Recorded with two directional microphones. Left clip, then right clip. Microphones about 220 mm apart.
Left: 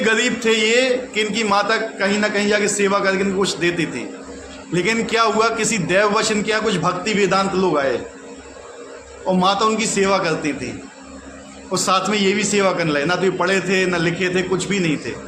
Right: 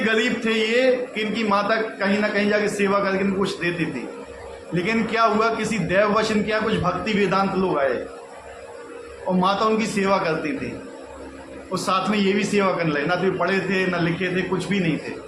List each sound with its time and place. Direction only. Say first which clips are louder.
0.0 s speech: left 4 dB; 55° left (ahead or behind)
4.7 s speech: left 4 dB; 55° left (ahead or behind)
9.4 s speech: left 3 dB; 55° left (ahead or behind)
11.7 s speech: left 4 dB; 50° left (ahead or behind)